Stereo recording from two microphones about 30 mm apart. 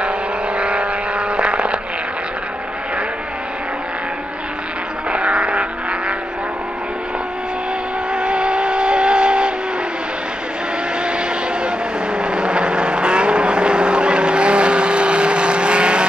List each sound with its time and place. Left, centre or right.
0.6 s vehicle: right
5.1 s a sound: right
8.1 s vehicle: right
11.1 s vehicle: right